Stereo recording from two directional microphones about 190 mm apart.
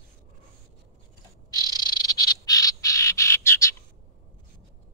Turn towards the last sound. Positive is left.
turn(degrees=15)  # may be behind; listen again after turning